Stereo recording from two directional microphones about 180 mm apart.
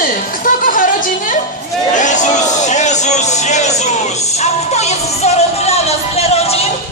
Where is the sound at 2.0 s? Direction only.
45° left (ahead or behind).